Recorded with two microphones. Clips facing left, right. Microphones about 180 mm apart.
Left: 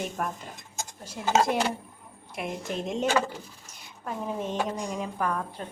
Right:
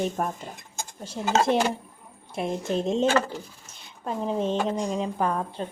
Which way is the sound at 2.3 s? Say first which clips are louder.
Right 6 dB; 30° right (ahead or behind).